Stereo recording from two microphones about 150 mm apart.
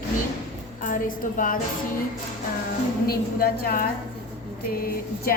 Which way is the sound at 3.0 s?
85° left.